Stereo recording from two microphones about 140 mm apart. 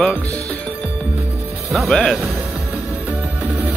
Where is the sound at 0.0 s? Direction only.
5° left (ahead or behind).